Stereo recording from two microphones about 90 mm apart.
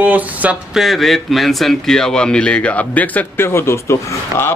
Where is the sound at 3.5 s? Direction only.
30° left (ahead or behind).